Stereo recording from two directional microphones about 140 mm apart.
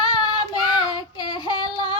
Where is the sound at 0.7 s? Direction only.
30° left (ahead or behind).